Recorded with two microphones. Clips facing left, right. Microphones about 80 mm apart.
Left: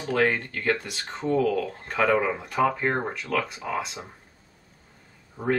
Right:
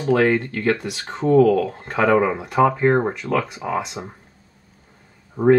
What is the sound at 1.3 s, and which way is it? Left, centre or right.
Speech, right.